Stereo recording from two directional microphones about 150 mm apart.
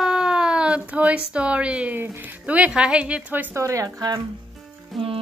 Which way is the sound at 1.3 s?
10° right (ahead or behind).